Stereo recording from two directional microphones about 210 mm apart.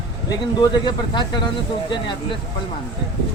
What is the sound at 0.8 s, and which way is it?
Speech, 20° left (ahead or behind).